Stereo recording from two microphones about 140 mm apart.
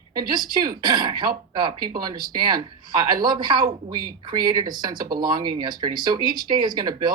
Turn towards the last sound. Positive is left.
turn(degrees=-30)  # may be behind; listen again after turning